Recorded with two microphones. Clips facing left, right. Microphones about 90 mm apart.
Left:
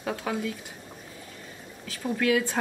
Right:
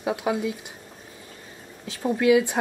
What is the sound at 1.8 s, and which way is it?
Speech, 20° right (ahead or behind).